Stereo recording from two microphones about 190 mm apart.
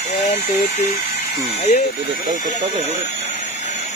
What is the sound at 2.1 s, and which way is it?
Speech, 40° right (ahead or behind).